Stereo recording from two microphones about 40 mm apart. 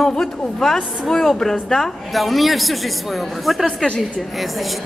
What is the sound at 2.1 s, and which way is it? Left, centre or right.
Speech, centre.